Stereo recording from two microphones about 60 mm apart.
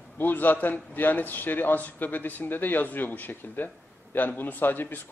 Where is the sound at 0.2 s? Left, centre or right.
Left.